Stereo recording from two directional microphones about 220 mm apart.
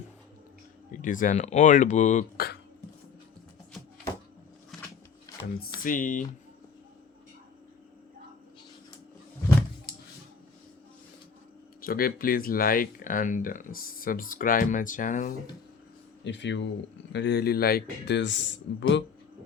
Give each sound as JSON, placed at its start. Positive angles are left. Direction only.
{"t": 0.9, "sound": "speech", "side_deg": 35}
{"t": 4.7, "sound": "a sound", "side_deg": 0}
{"t": 5.8, "sound": "speech", "side_deg": 35}
{"t": 11.8, "sound": "speech", "side_deg": 40}
{"t": 16.2, "sound": "speech", "side_deg": 55}